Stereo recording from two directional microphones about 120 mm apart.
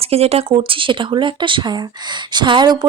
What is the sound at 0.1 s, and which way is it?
Speech, 60° right (ahead or behind).